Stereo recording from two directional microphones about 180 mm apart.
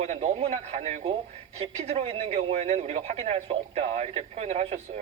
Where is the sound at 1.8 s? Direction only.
35° right (ahead or behind).